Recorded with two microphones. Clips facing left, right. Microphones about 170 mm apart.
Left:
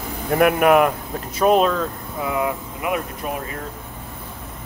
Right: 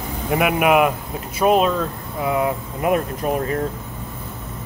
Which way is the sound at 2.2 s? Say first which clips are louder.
Right 3 dB; 25° right (ahead or behind).